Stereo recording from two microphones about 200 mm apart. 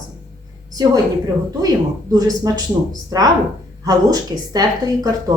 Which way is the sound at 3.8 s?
20° right (ahead or behind).